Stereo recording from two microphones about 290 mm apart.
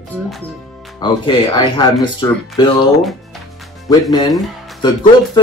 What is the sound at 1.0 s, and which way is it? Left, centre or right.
Speech, centre.